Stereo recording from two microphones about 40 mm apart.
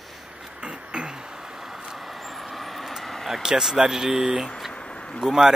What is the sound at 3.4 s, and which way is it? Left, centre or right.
Speech, centre.